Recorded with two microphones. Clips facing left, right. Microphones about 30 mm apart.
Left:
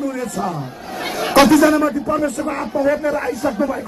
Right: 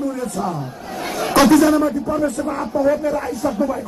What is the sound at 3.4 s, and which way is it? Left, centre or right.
Speech, left.